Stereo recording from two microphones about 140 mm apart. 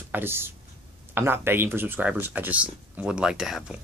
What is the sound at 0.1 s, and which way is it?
Speech, 15° right (ahead or behind).